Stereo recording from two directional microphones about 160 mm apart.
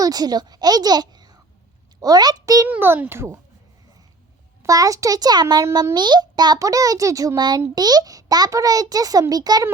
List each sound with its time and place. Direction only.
0.0 s a child's voice: 25° right (ahead or behind)
2.6 s a child's voice: 15° right (ahead or behind)
4.6 s a child's voice: 20° right (ahead or behind)